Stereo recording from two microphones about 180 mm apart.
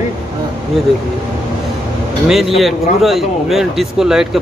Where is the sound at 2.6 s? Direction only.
Centre (ahead or behind).